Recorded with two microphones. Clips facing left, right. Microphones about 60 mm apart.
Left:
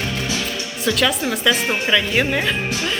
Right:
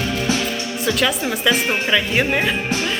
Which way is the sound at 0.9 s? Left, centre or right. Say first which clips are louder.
Left 1 dB; centre.